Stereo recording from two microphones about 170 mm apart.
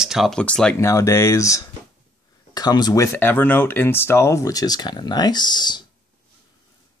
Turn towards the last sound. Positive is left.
turn(degrees=25)  # may be behind; listen again after turning